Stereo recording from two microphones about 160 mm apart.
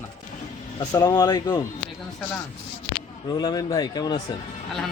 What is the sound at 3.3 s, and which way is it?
Speech, 25° left (ahead or behind).